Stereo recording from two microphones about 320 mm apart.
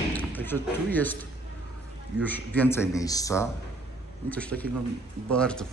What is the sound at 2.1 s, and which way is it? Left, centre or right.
A man's voice, centre.